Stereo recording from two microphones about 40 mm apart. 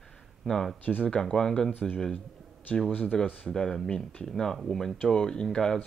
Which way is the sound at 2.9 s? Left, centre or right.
Left.